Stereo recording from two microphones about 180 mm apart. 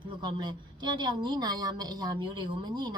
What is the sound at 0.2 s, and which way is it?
A woman's voice, 25° right (ahead or behind).